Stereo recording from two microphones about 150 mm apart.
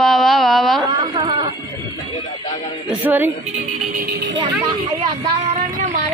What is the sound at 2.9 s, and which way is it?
Speech, 10° right (ahead or behind).